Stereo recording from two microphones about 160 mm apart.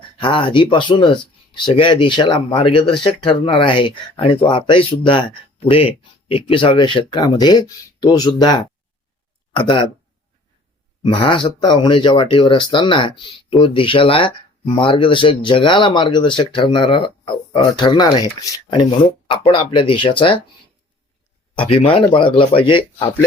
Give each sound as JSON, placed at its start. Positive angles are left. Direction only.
{"t": 0.2, "sound": "speech", "side_deg": 30}
{"t": 11.0, "sound": "speech", "side_deg": 30}
{"t": 18.7, "sound": "speech", "side_deg": 30}
{"t": 21.5, "sound": "speech", "side_deg": 35}